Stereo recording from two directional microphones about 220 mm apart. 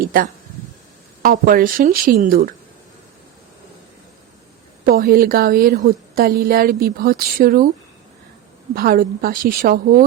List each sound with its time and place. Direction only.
0.0 s a woman's voice: 40° right (ahead or behind)
4.9 s a woman's voice: 40° right (ahead or behind)
8.7 s a woman's voice: 45° right (ahead or behind)